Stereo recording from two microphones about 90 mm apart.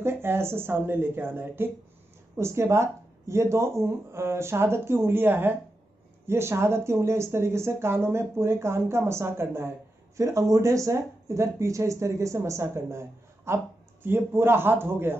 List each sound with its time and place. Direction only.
0.0 s speech: 25° right (ahead or behind)